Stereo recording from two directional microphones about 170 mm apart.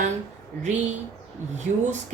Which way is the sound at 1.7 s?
50° right (ahead or behind).